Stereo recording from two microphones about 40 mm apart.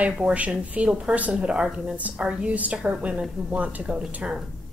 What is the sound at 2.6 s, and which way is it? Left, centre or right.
A woman's voice, right.